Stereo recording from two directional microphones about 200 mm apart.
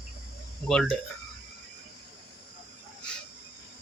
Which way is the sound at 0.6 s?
5° left (ahead or behind).